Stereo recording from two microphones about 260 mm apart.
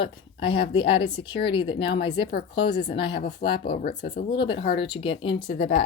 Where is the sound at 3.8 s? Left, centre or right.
Left.